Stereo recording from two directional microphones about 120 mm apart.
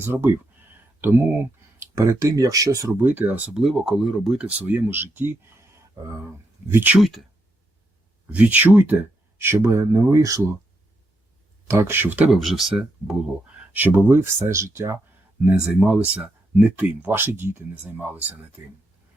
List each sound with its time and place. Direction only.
0.0 s speech: 15° right (ahead or behind)
3.1 s speech: 15° right (ahead or behind)
7.0 s speech: centre (ahead or behind)
8.3 s speech: 15° right (ahead or behind)
11.7 s speech: 20° right (ahead or behind)
12.3 s speech: centre (ahead or behind)
13.7 s speech: 15° right (ahead or behind)
15.4 s speech: 10° right (ahead or behind)